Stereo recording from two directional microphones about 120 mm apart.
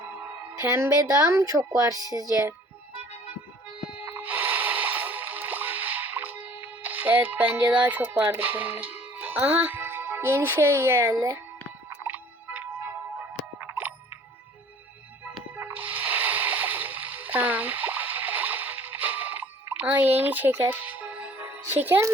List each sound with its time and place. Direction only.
1.3 s speech: 30° right (ahead or behind)
4.0 s music: 15° right (ahead or behind)
6.8 s a child's voice: 15° right (ahead or behind)
11.9 s music: 15° right (ahead or behind)
13.6 s ding: 15° right (ahead or behind)
15.5 s music: 15° right (ahead or behind)